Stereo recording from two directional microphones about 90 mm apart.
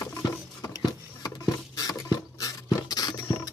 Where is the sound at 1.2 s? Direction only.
45° left (ahead or behind).